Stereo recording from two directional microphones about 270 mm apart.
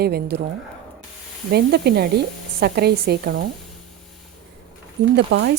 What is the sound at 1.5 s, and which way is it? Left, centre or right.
A woman's voice, right.